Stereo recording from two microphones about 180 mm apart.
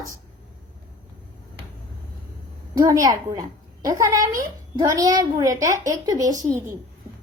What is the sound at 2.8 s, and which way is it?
A woman's voice, 20° right (ahead or behind).